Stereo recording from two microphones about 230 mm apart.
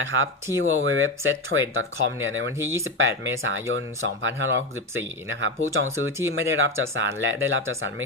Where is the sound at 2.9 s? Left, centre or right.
Right.